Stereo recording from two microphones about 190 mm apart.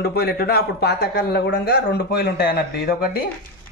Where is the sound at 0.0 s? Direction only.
55° left (ahead or behind).